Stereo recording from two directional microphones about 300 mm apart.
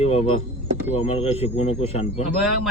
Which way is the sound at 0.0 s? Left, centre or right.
Centre.